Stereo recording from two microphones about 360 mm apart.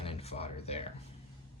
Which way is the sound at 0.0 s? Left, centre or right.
Centre.